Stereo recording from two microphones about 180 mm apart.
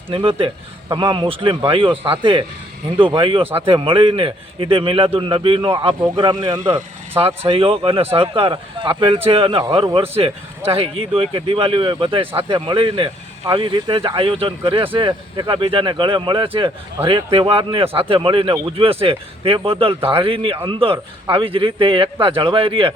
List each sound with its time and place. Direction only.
0.1 s speech: 30° right (ahead or behind)